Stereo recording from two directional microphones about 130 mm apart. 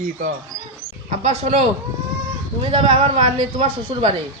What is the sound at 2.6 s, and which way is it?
Speech, 45° right (ahead or behind).